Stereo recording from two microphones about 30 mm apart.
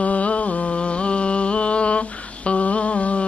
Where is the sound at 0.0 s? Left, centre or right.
Left.